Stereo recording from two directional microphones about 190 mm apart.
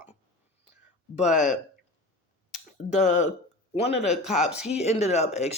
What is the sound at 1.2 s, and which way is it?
Speech, 40° left (ahead or behind).